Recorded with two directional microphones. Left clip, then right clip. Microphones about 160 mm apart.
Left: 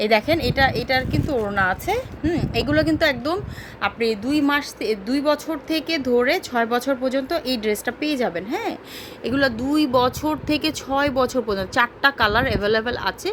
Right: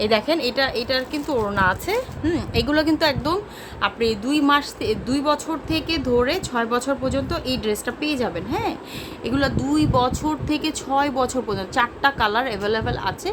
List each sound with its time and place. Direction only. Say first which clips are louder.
0.0 s a woman's voice: left 1 dB; 20° left (ahead or behind)
2.2 s a woman's voice: left 2 dB; centre (ahead or behind); by 13.3 s 25° left (ahead or behind)